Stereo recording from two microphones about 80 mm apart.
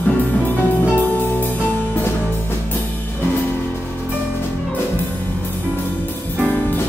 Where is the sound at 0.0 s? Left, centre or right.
Left.